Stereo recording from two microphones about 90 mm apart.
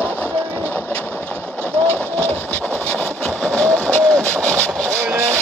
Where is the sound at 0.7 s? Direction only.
20° left (ahead or behind).